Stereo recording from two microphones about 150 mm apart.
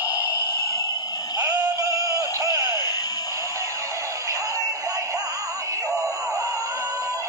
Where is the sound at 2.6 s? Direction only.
25° left (ahead or behind).